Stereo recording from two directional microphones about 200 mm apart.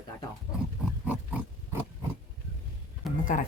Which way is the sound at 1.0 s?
5° right (ahead or behind).